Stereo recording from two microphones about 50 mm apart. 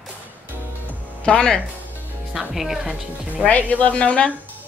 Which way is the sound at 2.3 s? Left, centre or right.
Centre.